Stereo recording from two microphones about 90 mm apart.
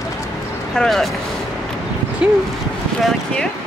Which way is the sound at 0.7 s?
Centre (ahead or behind).